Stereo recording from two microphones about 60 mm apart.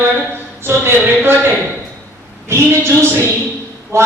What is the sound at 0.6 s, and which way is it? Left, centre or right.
Speech, right.